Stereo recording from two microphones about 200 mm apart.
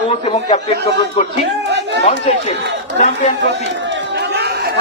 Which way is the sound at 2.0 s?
35° left (ahead or behind).